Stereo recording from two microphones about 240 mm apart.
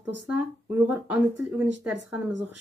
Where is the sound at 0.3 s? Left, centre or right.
Centre.